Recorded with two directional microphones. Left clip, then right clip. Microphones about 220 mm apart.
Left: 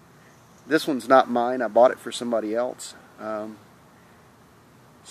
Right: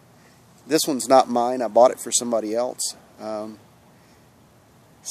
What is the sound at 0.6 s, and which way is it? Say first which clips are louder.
Speech: right 1 dB; 10° right (ahead or behind).